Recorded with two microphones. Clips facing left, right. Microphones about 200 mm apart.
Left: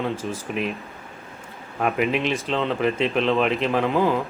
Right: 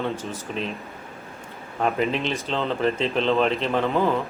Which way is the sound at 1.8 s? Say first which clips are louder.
Left 1 dB; 10° left (ahead or behind).